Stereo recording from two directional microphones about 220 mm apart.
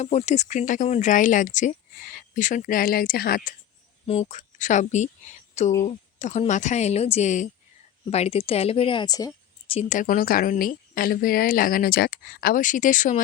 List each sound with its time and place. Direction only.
0.0 s a woman's voice: 30° left (ahead or behind)
4.0 s a woman's voice: 25° left (ahead or behind)